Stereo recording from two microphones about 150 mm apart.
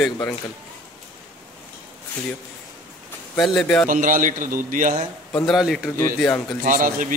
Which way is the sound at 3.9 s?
65° right (ahead or behind).